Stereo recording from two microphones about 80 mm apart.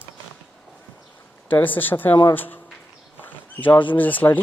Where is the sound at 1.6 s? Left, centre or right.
Left.